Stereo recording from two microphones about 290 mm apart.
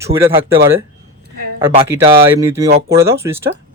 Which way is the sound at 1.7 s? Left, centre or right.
Centre.